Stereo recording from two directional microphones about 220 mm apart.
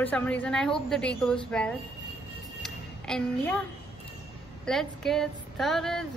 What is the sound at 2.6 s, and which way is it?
Music, 5° left (ahead or behind).